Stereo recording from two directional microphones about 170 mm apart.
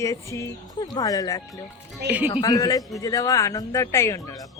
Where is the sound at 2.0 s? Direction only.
75° right (ahead or behind).